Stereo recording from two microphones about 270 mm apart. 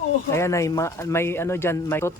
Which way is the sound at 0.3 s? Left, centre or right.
Centre.